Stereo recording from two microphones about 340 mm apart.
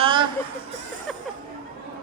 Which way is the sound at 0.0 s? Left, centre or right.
Centre.